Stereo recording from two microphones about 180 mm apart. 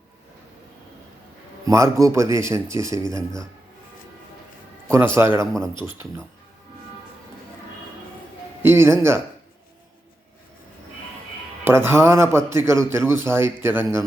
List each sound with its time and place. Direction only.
1.6 s a man's voice: 15° right (ahead or behind)
4.9 s a man's voice: 15° right (ahead or behind)
8.6 s a man's voice: 15° right (ahead or behind)
11.6 s a man's voice: 15° right (ahead or behind)